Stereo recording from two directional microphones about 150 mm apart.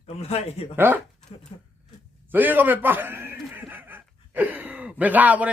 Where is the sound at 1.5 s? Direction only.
40° left (ahead or behind).